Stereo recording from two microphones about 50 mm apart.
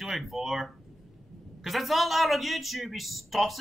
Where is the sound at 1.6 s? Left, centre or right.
Centre.